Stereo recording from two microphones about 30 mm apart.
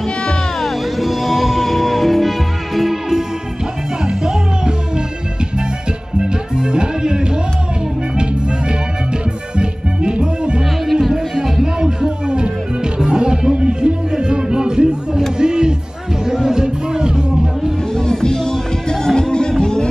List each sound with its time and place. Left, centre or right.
0.6 s music: centre
1.0 s music: centre
4.0 s music: right
6.1 s music: right
10.1 s music: right
15.3 s a sound: right
16.3 s music: centre
17.9 s music: left